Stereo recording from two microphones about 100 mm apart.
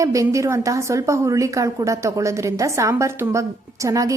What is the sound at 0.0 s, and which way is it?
A woman's voice, 35° right (ahead or behind).